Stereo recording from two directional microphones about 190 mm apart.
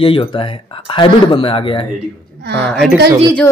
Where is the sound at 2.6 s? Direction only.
Centre (ahead or behind).